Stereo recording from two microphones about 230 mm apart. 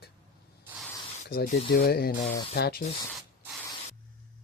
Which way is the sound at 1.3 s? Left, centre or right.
Left.